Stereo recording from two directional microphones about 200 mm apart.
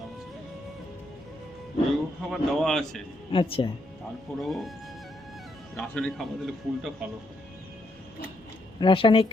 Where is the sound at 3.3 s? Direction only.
25° left (ahead or behind).